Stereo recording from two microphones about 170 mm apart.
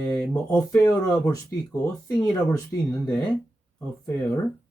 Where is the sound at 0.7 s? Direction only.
20° left (ahead or behind).